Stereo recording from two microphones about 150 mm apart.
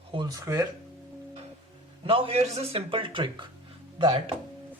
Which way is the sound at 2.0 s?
40° right (ahead or behind).